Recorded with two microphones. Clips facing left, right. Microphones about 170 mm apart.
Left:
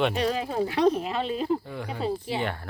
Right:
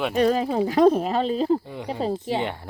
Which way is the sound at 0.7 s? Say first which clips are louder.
Right 6 dB; 45° right (ahead or behind).